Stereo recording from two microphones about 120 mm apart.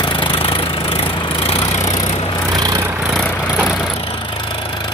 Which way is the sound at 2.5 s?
35° right (ahead or behind).